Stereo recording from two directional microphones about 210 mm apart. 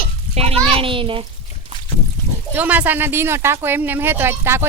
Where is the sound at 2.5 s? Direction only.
5° right (ahead or behind).